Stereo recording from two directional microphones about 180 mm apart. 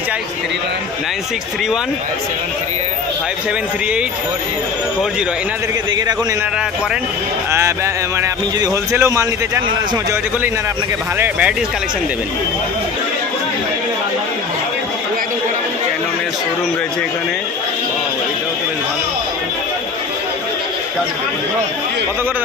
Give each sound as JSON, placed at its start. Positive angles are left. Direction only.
{"t": 7.5, "sound": "speech", "side_deg": -15}
{"t": 11.1, "sound": "speech", "side_deg": -5}